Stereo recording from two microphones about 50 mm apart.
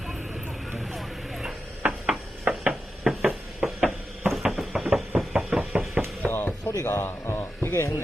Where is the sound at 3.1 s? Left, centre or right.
Centre.